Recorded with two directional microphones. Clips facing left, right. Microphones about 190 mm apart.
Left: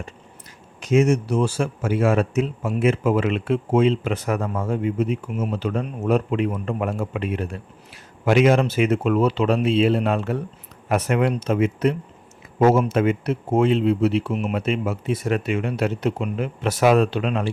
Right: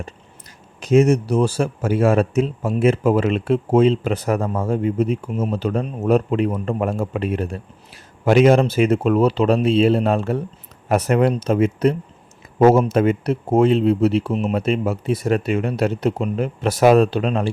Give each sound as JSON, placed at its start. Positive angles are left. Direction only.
{"t": 0.8, "sound": "speech", "side_deg": -35}